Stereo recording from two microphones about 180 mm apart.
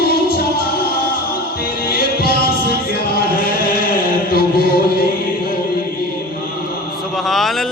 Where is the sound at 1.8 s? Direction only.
55° left (ahead or behind).